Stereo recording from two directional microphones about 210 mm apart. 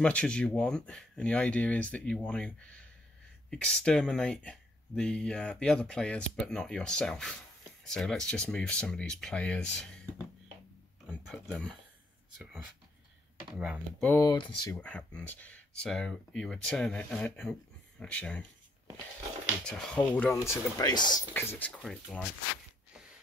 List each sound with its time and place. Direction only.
0.0 s speech: 5° left (ahead or behind)
11.1 s speech: centre (ahead or behind)
13.6 s speech: 5° right (ahead or behind)
14.0 s speech: 15° left (ahead or behind)
14.8 s speech: 5° left (ahead or behind)
19.6 s speech: 5° left (ahead or behind)
20.3 s speech: 15° left (ahead or behind)
21.3 s speech: 10° left (ahead or behind)